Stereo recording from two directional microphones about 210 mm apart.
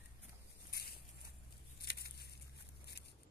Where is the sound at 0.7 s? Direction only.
50° left (ahead or behind).